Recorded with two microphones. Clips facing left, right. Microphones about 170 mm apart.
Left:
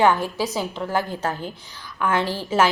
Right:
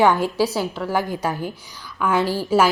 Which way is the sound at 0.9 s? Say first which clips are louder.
Right 2 dB; 15° right (ahead or behind).